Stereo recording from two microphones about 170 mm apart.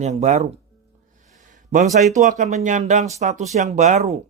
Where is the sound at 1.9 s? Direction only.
45° right (ahead or behind).